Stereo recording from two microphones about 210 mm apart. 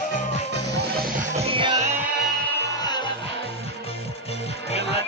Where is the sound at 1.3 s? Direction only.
25° right (ahead or behind).